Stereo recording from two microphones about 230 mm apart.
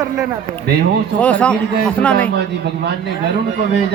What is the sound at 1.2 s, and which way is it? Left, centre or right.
A man's voice, centre.